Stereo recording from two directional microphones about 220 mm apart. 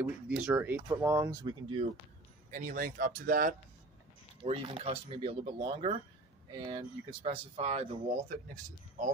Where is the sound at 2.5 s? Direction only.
40° right (ahead or behind).